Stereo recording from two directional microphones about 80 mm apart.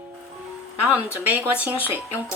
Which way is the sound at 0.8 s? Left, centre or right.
Centre.